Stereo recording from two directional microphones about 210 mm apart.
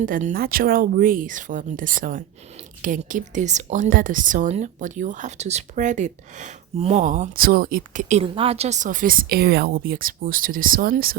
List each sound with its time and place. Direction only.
0.0 s speech: 40° right (ahead or behind)